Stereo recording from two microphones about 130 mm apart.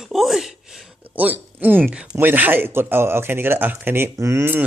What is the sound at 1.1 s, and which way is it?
Speech, 15° right (ahead or behind).